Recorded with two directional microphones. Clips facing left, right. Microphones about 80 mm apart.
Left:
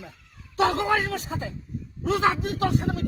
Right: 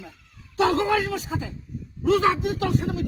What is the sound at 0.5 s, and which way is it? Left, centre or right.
A man's voice, left.